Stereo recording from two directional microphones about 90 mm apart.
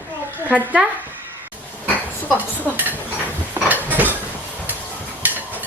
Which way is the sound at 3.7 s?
20° right (ahead or behind).